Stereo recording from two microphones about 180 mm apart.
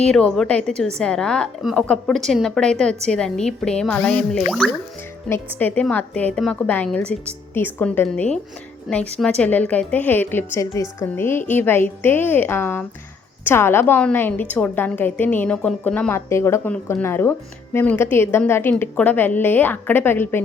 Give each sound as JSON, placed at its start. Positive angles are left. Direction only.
{"t": 0.1, "sound": "a woman's voice", "side_deg": 5}